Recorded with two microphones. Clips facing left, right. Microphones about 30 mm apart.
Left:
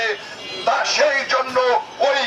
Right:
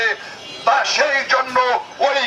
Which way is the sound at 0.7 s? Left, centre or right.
Centre.